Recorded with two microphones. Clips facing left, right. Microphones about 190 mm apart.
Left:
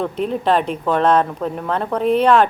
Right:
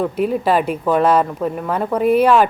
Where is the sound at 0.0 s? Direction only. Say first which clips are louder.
Right 2 dB; 5° right (ahead or behind).